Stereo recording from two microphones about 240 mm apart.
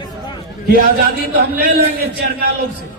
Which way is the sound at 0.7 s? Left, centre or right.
Right.